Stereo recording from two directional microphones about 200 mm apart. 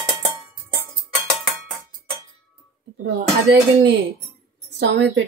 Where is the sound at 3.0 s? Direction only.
65° right (ahead or behind).